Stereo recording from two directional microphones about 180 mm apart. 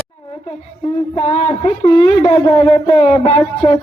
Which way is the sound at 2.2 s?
25° left (ahead or behind).